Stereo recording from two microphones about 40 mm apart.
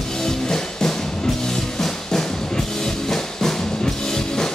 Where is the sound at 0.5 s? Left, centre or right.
Centre.